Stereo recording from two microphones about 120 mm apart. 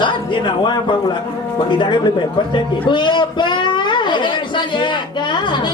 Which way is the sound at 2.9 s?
40° left (ahead or behind).